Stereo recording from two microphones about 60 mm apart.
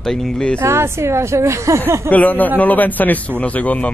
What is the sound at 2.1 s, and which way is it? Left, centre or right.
Speech, left.